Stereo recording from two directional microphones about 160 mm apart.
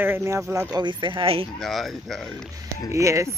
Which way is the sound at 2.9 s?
20° right (ahead or behind).